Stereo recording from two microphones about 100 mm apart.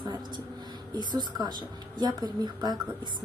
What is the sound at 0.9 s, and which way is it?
A woman's voice, 45° right (ahead or behind).